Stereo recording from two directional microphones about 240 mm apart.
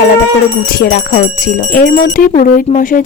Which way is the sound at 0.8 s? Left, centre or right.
Left.